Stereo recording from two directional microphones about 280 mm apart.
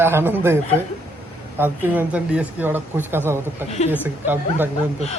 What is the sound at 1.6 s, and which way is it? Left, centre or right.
Speech, centre.